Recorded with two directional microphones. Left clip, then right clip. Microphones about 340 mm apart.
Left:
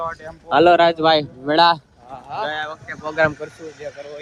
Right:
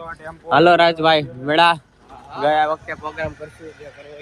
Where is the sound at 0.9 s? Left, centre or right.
Right.